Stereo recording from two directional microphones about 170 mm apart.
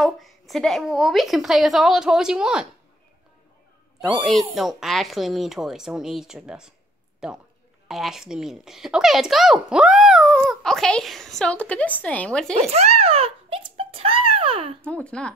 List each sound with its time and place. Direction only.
0.0 s speech: centre (ahead or behind)
4.2 s speech: centre (ahead or behind)
12.5 s a sound: 40° right (ahead or behind)
14.8 s speech: 5° left (ahead or behind)